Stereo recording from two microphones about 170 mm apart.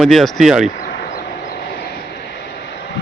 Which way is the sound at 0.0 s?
Centre (ahead or behind).